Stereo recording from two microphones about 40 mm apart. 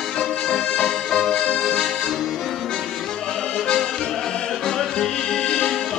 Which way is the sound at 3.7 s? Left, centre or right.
Centre.